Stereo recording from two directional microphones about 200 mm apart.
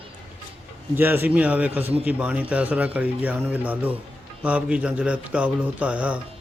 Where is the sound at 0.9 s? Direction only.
10° right (ahead or behind).